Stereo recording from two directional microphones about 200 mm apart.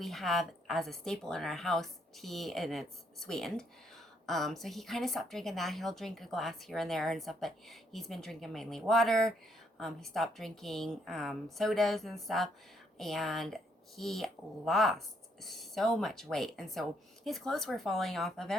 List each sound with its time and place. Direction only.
0.0 s speech: centre (ahead or behind)